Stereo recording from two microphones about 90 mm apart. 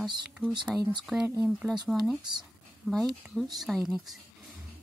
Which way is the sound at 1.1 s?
15° right (ahead or behind).